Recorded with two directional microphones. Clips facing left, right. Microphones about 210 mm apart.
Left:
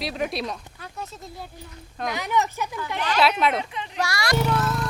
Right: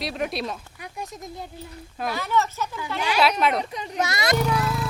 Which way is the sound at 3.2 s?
Centre (ahead or behind).